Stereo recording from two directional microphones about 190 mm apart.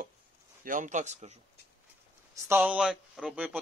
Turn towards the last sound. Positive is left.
turn(degrees=-5)  # may be behind; listen again after turning